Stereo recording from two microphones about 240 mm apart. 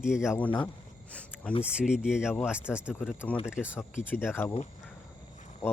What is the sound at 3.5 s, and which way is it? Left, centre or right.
Speech, centre.